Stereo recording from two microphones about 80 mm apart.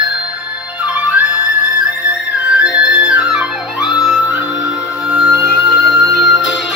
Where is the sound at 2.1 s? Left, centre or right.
Centre.